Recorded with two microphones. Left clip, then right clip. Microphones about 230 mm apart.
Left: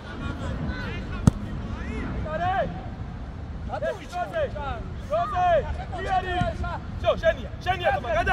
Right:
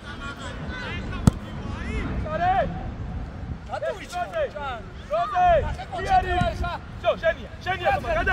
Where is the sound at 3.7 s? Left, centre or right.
Right.